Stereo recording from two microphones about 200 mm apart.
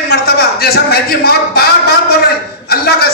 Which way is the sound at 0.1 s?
50° left (ahead or behind).